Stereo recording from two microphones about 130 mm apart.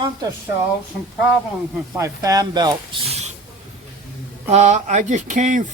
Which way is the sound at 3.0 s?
55° right (ahead or behind).